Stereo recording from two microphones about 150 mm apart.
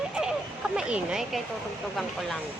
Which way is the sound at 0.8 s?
5° right (ahead or behind).